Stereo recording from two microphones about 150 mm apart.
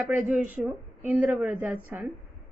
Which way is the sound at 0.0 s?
10° right (ahead or behind).